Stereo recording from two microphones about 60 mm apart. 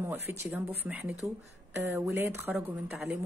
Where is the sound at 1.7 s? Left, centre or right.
Right.